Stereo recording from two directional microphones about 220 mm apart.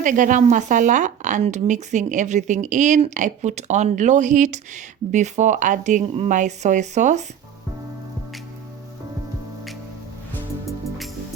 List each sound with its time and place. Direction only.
0.0 s a woman's voice: 35° right (ahead or behind)